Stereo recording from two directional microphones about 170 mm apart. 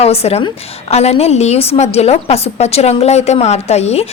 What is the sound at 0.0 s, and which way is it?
A woman's voice, 35° left (ahead or behind).